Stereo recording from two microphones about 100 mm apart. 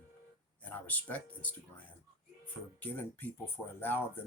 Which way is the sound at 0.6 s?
15° left (ahead or behind).